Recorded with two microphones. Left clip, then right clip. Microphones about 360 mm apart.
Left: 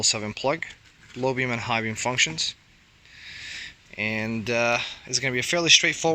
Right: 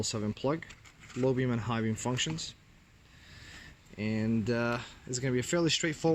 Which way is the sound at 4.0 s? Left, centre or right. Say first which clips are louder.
Left 7 dB; centre.